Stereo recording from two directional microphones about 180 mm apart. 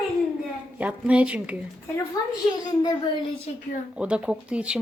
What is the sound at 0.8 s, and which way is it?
Speech, 5° right (ahead or behind).